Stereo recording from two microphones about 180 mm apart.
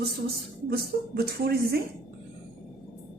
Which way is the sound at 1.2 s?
60° right (ahead or behind).